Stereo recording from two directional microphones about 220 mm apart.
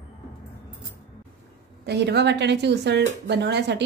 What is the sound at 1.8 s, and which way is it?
Speech, 50° right (ahead or behind).